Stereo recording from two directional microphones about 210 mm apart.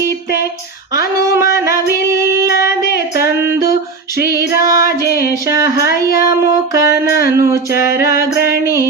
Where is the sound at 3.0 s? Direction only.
15° right (ahead or behind).